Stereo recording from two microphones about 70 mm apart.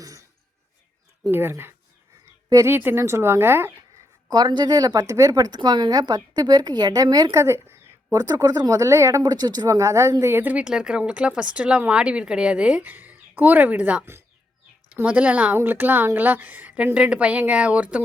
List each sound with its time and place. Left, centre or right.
0.0 s a sound: right
1.3 s a woman's voice: right
4.3 s speech: right
7.4 s a woman's voice: right
8.1 s speech: right
9.2 s speech: right
9.6 s a woman's voice: right
10.3 s a woman's voice: right
10.6 s speech: centre
12.9 s speech: right
14.0 s speech: right
15.0 s a woman's voice: right